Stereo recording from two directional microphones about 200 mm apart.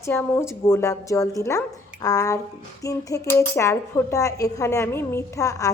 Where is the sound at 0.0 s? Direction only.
10° left (ahead or behind).